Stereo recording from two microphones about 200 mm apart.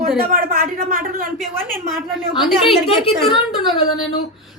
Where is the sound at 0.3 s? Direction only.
45° right (ahead or behind).